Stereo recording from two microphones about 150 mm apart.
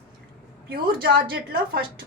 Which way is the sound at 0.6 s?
90° right.